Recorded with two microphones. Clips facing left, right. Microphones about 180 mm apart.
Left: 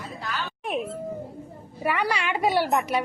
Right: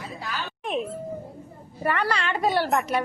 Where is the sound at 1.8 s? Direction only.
10° left (ahead or behind).